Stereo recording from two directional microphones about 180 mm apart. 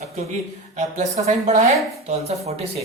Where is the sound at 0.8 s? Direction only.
40° right (ahead or behind).